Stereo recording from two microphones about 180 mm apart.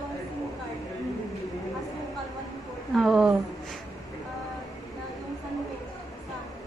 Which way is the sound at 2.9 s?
Centre (ahead or behind).